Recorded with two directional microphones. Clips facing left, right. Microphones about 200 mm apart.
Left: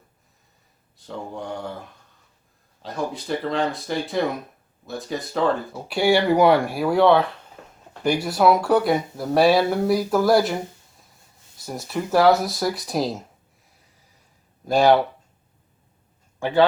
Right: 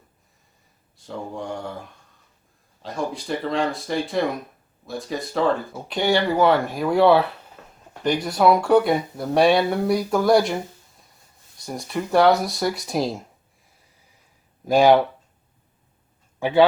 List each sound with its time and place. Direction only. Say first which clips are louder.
0.9 s speech: right 1 dB; centre (ahead or behind)
8.0 s speech: even; 5° left (ahead or behind)
14.8 s speech: right 1 dB; 15° right (ahead or behind)
16.4 s speech: right 2 dB; 10° right (ahead or behind)